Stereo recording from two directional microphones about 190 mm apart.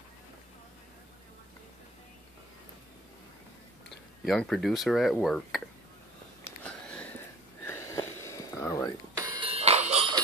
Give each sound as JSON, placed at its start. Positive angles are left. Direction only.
{"t": 4.2, "sound": "speech", "side_deg": 0}
{"t": 6.4, "sound": "a sound", "side_deg": 5}
{"t": 7.6, "sound": "wheeze", "side_deg": 15}
{"t": 9.2, "sound": "music", "side_deg": -30}